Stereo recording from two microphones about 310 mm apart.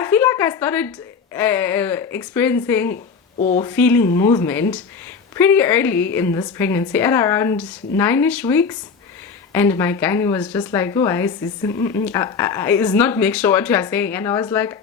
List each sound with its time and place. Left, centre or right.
0.0 s a woman's voice: centre
2.9 s a woman's voice: left
3.6 s a woman's voice: centre